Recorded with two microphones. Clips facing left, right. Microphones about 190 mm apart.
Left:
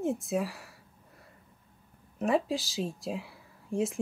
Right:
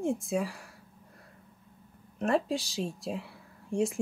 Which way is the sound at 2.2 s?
Centre (ahead or behind).